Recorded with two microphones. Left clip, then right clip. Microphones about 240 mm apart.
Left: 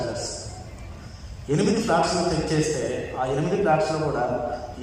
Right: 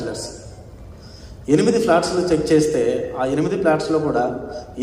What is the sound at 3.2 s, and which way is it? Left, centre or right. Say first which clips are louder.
A man's voice: right 4 dB; right.